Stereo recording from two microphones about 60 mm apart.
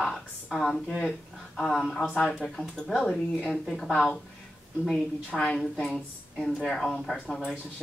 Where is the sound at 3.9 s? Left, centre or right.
Centre.